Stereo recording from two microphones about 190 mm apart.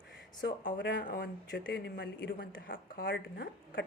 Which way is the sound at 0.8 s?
70° left (ahead or behind).